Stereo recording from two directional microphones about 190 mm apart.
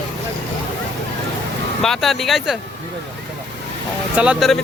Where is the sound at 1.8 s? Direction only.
Centre (ahead or behind).